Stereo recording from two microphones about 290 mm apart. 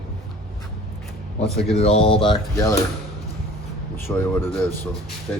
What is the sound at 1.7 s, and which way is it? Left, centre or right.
Speech, left.